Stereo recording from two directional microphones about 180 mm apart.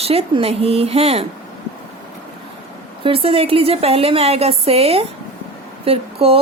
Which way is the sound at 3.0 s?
30° right (ahead or behind).